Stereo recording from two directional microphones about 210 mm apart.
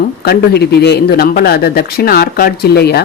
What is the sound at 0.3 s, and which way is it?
Speech, 50° left (ahead or behind).